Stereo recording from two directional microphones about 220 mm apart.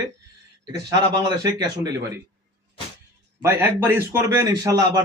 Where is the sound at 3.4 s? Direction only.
10° right (ahead or behind).